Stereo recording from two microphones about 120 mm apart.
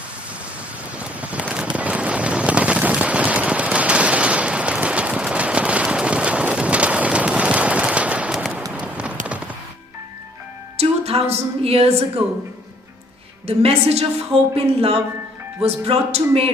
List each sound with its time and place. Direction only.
0.9 s a sound: 10° right (ahead or behind)
8.7 s clip-clop: 10° right (ahead or behind)
10.8 s music: 60° right (ahead or behind)
13.6 s speech: 55° right (ahead or behind)